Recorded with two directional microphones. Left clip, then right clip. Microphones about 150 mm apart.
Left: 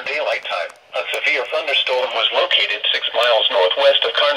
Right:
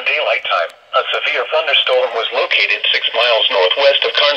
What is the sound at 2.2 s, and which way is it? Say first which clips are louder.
Speech: right 1 dB; 15° right (ahead or behind).